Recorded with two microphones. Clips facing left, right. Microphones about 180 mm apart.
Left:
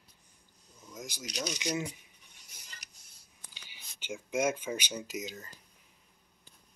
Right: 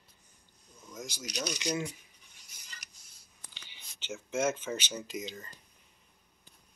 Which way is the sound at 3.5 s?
10° left (ahead or behind).